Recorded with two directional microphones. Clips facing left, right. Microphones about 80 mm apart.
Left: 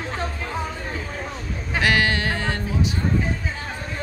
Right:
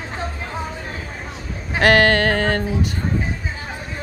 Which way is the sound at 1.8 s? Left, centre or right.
Right.